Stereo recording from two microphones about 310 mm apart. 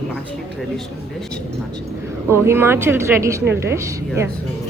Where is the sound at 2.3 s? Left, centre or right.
Centre.